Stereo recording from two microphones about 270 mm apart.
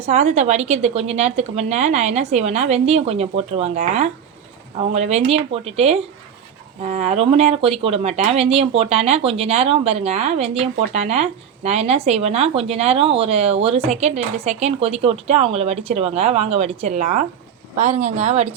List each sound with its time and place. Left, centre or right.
0.0 s speech: right